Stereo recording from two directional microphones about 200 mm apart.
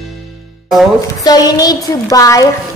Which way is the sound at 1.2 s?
20° left (ahead or behind).